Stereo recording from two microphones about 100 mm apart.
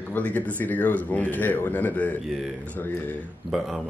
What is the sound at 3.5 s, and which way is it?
Speech, centre (ahead or behind).